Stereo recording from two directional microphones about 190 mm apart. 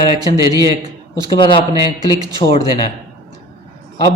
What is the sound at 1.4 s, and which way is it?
Speech, 25° left (ahead or behind).